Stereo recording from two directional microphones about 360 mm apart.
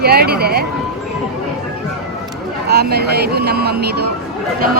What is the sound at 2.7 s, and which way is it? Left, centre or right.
A woman's voice, right.